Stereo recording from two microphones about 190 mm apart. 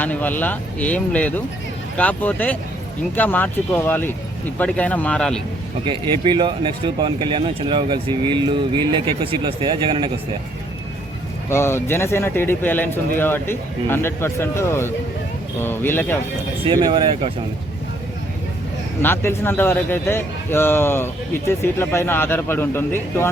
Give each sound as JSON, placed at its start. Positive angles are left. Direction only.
{"t": 0.0, "sound": "a man's voice", "side_deg": 10}
{"t": 5.8, "sound": "speech", "side_deg": -25}
{"t": 11.4, "sound": "a man's voice", "side_deg": 15}
{"t": 16.8, "sound": "speech", "side_deg": -25}
{"t": 19.0, "sound": "a man's voice", "side_deg": 15}